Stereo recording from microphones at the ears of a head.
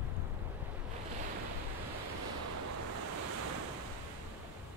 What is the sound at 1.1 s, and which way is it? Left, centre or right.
Waves, right.